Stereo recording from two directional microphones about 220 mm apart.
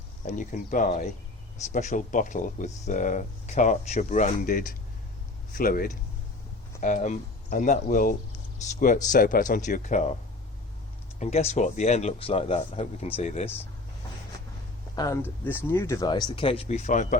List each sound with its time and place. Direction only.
0.3 s speech: 35° left (ahead or behind)
11.2 s speech: 30° left (ahead or behind)
14.9 s speech: 15° left (ahead or behind); by 17.2 s 35° left (ahead or behind)